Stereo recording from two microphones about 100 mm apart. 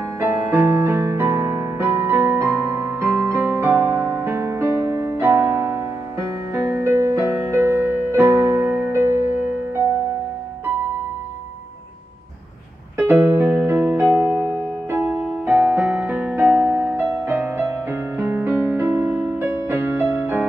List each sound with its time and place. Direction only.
0.2 s music: 25° right (ahead or behind)
12.9 s music: 25° right (ahead or behind)
19.5 s music: 25° right (ahead or behind)